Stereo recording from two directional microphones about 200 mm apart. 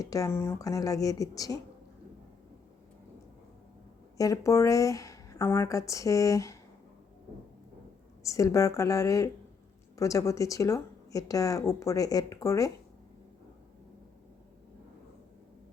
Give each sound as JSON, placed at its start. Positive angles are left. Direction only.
{"t": 0.0, "sound": "speech", "side_deg": 15}
{"t": 4.2, "sound": "speech", "side_deg": 15}
{"t": 8.2, "sound": "speech", "side_deg": 15}